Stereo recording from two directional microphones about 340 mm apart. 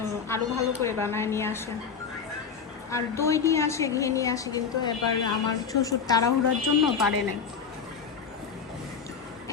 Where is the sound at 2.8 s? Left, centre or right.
Centre.